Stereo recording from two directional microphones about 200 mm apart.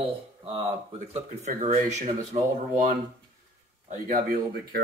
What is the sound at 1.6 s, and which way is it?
Speech, 30° right (ahead or behind).